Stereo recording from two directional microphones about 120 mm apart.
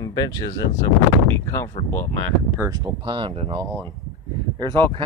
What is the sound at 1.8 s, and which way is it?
Speech, 65° left (ahead or behind).